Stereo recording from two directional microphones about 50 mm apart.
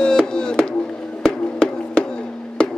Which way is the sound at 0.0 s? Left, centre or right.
Centre.